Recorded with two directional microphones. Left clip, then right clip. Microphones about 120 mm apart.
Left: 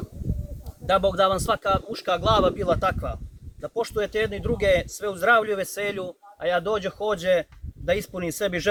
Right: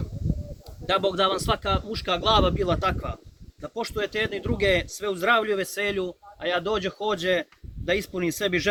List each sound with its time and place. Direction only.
0.9 s speech: 40° left (ahead or behind)